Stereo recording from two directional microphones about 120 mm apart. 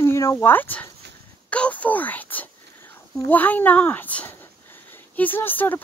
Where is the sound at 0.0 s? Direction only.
25° left (ahead or behind).